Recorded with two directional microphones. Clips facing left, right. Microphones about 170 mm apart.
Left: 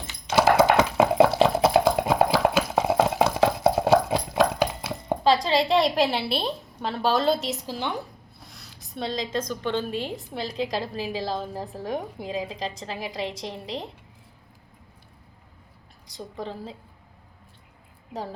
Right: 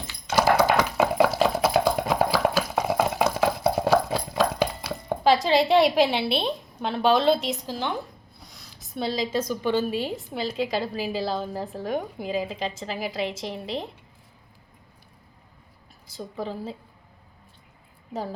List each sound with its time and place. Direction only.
0.1 s a sound: 25° left (ahead or behind)
5.3 s a woman's voice: 5° right (ahead or behind)
16.0 s a woman's voice: 5° right (ahead or behind)
18.1 s a woman's voice: centre (ahead or behind)